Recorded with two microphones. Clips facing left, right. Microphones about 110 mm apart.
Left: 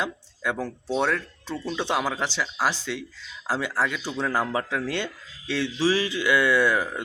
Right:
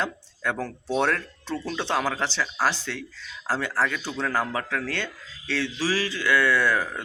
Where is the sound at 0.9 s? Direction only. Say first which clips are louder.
Right 1 dB; centre (ahead or behind).